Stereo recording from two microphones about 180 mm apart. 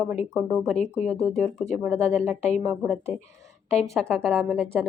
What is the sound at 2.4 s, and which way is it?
Speech, 40° left (ahead or behind).